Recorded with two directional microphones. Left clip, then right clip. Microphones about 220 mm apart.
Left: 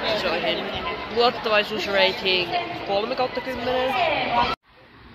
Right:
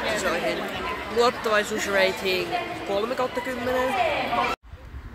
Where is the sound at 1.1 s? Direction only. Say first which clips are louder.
Left 2 dB; 15° right (ahead or behind).